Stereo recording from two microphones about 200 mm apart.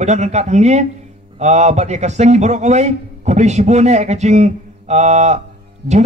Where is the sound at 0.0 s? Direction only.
35° right (ahead or behind).